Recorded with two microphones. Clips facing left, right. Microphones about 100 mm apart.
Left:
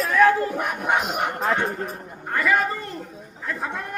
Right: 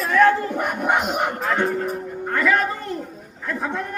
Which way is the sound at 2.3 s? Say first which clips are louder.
Right 1 dB; 5° left (ahead or behind).